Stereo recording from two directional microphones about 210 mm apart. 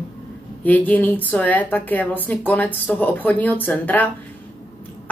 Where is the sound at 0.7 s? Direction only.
10° left (ahead or behind).